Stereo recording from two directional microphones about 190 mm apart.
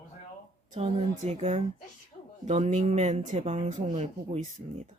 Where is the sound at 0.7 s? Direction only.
35° right (ahead or behind).